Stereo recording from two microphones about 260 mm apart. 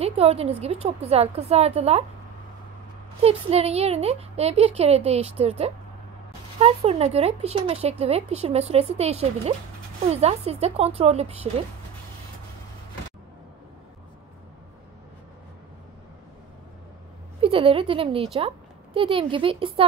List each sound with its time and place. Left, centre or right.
0.0 s speech: right
3.2 s speech: right
17.4 s speech: right